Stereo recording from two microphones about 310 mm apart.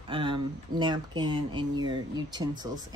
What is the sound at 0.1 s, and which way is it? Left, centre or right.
Speech, centre.